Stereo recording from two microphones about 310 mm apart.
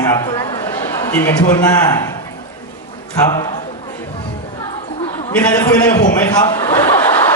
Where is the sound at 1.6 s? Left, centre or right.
Centre.